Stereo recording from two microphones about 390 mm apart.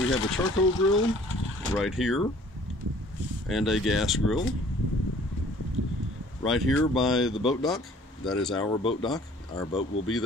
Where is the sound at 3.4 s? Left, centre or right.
Centre.